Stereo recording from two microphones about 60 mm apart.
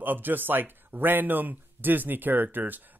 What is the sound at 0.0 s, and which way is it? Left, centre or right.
Speech, right.